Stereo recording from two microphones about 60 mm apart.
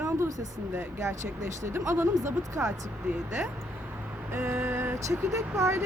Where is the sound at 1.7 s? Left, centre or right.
Right.